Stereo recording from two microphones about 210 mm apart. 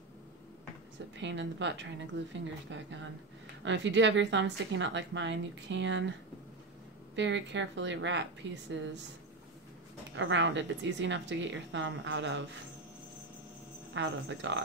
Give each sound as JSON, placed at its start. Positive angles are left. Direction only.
{"t": 1.1, "sound": "a woman's voice", "side_deg": -60}
{"t": 7.2, "sound": "a woman's voice", "side_deg": -60}
{"t": 10.1, "sound": "a woman's voice", "side_deg": -60}
{"t": 13.9, "sound": "a woman's voice", "side_deg": -60}